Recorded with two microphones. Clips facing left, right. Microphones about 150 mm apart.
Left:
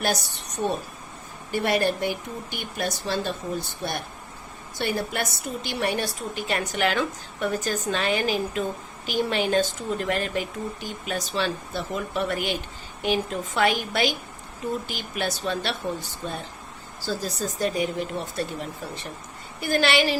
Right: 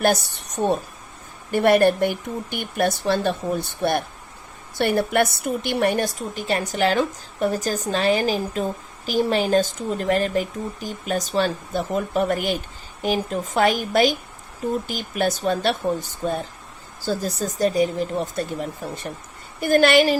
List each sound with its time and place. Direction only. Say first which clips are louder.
0.0 s speech: right 6 dB; 50° right (ahead or behind)
4.8 s a woman's voice: right 8 dB; 55° right (ahead or behind)